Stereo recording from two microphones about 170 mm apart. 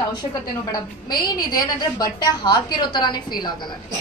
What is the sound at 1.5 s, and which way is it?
A woman's voice, 25° left (ahead or behind).